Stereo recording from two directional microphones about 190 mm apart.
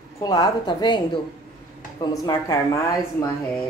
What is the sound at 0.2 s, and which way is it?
A woman's voice, 20° left (ahead or behind).